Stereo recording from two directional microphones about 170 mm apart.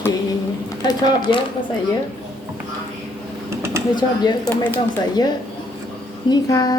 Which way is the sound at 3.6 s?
15° right (ahead or behind).